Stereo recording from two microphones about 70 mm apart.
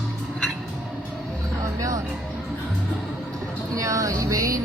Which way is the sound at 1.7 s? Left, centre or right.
Right.